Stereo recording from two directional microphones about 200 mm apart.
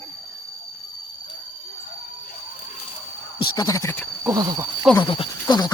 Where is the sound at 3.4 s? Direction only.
20° left (ahead or behind).